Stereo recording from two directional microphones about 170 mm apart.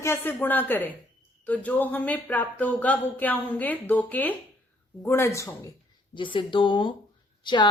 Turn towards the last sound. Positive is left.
turn(degrees=25)  # may be behind; listen again after turning